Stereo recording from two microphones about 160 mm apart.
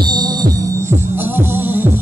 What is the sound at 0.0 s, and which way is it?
Music, 25° right (ahead or behind).